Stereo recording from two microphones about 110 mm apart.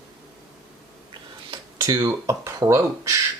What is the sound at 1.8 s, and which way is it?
Speech, 30° right (ahead or behind).